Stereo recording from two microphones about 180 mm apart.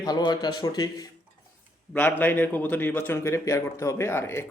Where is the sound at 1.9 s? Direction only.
10° left (ahead or behind).